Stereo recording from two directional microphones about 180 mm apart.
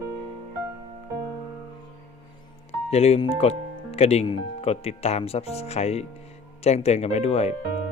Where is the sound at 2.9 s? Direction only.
35° left (ahead or behind).